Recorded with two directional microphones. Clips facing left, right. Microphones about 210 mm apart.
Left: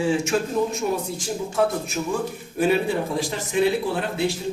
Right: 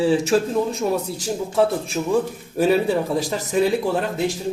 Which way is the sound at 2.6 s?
40° right (ahead or behind).